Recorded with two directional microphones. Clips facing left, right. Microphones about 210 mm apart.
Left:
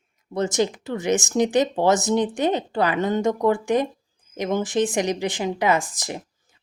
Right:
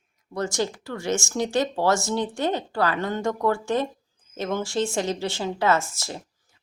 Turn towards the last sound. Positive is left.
turn(degrees=15)  # may be behind; listen again after turning